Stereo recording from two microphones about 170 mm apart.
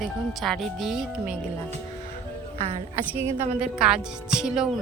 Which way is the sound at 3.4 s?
5° right (ahead or behind).